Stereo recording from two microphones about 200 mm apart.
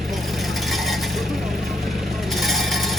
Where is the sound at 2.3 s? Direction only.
Centre (ahead or behind).